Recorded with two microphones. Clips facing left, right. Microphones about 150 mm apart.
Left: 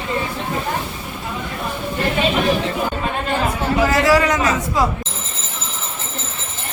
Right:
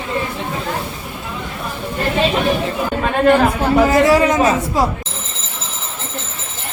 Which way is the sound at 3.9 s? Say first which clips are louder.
Right 3 dB; 25° right (ahead or behind).